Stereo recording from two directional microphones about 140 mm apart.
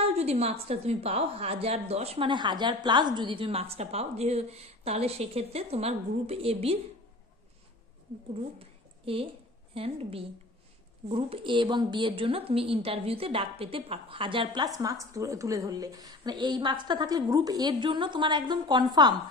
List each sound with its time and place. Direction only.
0.0 s a woman's voice: 50° right (ahead or behind)
8.5 s a sound: 40° right (ahead or behind)
9.8 s a woman's voice: 45° right (ahead or behind)
14.8 s a woman's voice: 25° right (ahead or behind)